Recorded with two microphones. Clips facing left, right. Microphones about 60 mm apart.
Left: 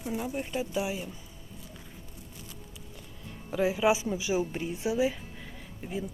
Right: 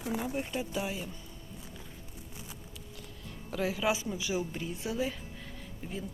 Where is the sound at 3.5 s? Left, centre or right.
Centre.